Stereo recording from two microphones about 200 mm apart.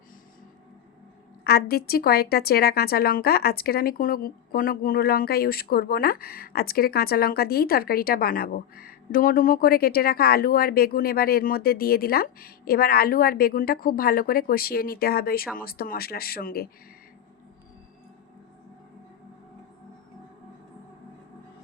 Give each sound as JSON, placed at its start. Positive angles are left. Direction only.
{"t": 1.5, "sound": "speech", "side_deg": 50}